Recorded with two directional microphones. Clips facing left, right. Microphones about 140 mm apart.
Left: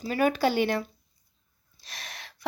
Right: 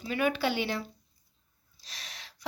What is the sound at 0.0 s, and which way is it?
Speech, 40° left (ahead or behind).